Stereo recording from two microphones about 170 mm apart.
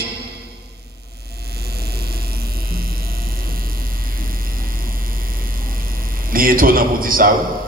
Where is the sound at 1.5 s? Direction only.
65° right (ahead or behind).